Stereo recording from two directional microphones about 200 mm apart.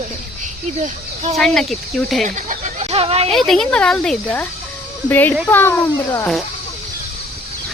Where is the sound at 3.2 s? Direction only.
Centre (ahead or behind).